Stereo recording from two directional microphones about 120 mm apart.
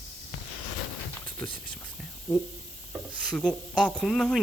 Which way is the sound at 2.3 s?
15° left (ahead or behind).